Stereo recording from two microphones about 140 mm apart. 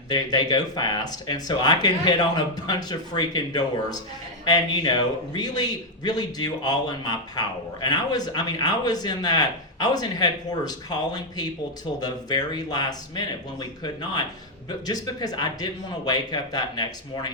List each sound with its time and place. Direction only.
0.1 s a man's voice: 30° left (ahead or behind)